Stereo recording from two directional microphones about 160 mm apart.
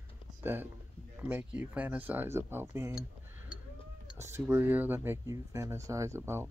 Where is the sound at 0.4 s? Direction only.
10° right (ahead or behind).